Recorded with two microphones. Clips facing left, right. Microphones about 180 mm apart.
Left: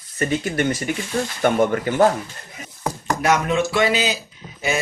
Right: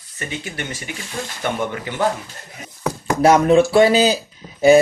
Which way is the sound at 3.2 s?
35° right (ahead or behind).